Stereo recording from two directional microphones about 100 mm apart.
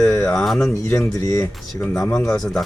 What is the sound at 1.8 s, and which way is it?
Speech, 10° left (ahead or behind).